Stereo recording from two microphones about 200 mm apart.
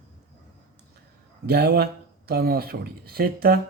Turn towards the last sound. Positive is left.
turn(degrees=-50)  # may be behind; listen again after turning